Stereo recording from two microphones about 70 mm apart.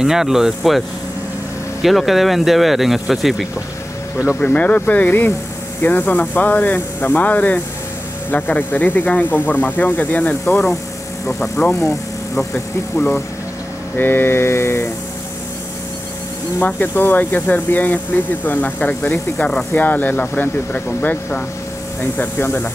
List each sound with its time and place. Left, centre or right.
0.0 s speech: centre
4.4 s speech: left
11.2 s speech: centre
13.9 s mantra: left
16.5 s speech: left